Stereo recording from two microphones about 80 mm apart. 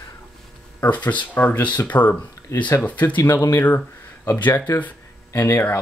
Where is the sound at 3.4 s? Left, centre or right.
Left.